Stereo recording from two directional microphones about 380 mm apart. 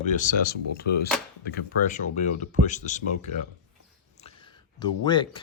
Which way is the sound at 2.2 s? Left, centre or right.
Centre.